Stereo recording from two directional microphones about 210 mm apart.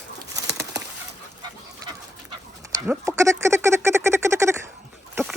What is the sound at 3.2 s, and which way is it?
Duck, 15° right (ahead or behind).